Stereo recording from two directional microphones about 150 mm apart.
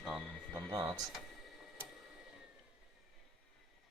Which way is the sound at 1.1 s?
Centre (ahead or behind).